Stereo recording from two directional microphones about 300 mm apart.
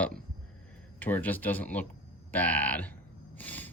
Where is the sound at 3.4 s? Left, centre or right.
Centre.